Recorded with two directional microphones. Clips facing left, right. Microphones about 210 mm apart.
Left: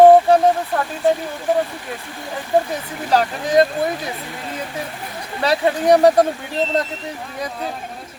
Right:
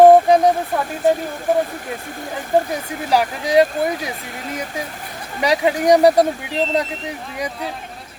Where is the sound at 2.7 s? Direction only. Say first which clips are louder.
Even; 10° right (ahead or behind).